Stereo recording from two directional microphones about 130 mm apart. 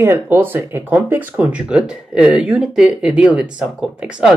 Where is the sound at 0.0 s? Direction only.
15° right (ahead or behind).